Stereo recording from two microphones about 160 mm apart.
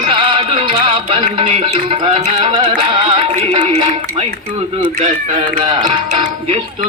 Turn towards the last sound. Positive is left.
turn(degrees=-25)  # may be behind; listen again after turning